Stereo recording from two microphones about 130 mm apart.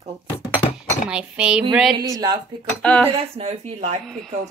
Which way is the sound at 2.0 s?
30° right (ahead or behind).